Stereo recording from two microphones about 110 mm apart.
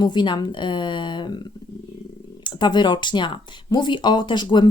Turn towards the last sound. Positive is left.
turn(degrees=45)  # may be behind; listen again after turning